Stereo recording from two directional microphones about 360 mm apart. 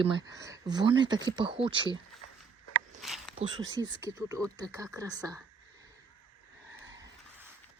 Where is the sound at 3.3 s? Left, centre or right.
Centre.